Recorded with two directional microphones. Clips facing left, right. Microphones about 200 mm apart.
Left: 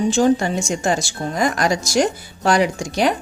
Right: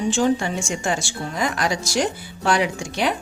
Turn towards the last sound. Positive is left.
turn(degrees=40)  # may be behind; listen again after turning